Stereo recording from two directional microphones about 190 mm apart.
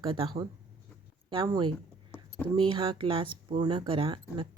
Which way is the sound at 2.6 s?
25° right (ahead or behind).